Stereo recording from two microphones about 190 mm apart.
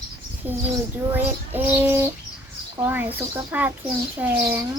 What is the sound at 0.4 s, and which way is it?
Bird, 10° right (ahead or behind).